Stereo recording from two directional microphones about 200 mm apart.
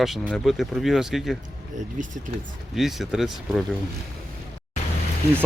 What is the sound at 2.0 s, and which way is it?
Speech, 40° right (ahead or behind).